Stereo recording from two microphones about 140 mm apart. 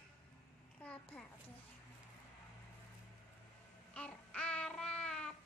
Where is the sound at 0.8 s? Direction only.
10° left (ahead or behind).